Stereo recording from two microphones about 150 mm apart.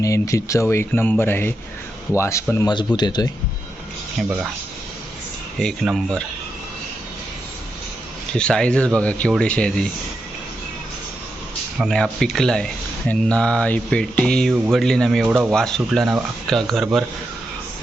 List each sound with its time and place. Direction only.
0.0 s speech: 20° left (ahead or behind)
2.6 s speech: 30° left (ahead or behind)
5.5 s speech: centre (ahead or behind)
8.3 s speech: 5° left (ahead or behind)
11.8 s speech: centre (ahead or behind)
15.3 s speech: 15° right (ahead or behind)
15.5 s speech: 5° left (ahead or behind)